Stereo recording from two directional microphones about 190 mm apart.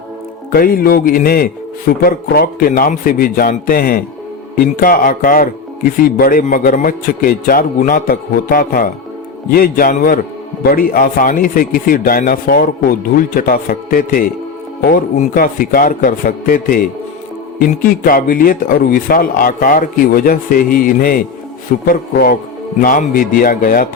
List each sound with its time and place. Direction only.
0.5 s a man's voice: 50° left (ahead or behind)